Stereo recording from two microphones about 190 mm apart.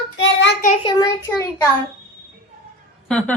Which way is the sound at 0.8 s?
20° left (ahead or behind).